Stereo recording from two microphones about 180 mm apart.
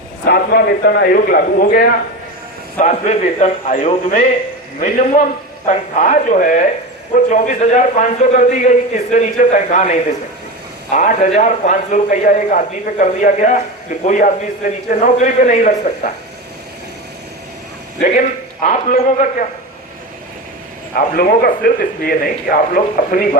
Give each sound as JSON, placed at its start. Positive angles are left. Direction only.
{"t": 0.3, "sound": "a man's voice", "side_deg": 55}
{"t": 2.7, "sound": "a man's voice", "side_deg": 40}
{"t": 18.6, "sound": "a man's voice", "side_deg": 45}
{"t": 21.2, "sound": "speech", "side_deg": 55}